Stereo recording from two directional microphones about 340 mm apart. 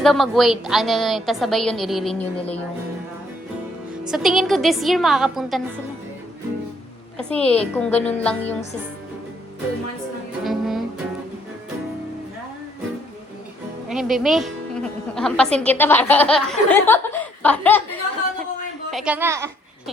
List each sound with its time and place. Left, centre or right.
0.0 s speech: centre
2.4 s speech: centre
4.0 s speech: centre
7.2 s speech: centre
10.4 s music: centre
13.8 s a woman's voice: centre
18.9 s speech: centre